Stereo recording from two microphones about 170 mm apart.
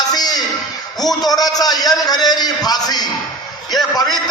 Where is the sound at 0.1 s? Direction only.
25° left (ahead or behind).